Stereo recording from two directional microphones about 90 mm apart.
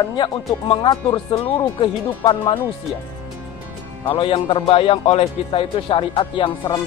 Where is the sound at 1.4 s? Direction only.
80° left.